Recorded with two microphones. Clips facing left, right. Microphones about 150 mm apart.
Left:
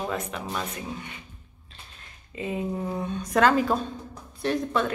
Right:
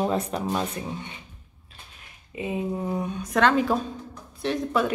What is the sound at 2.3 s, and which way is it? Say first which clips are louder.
Speech: right 1 dB; 20° right (ahead or behind).